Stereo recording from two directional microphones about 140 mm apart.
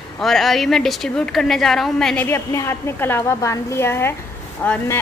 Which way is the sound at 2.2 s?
20° left (ahead or behind).